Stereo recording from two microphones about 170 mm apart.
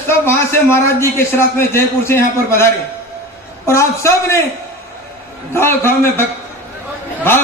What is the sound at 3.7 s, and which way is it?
Speech, 15° left (ahead or behind).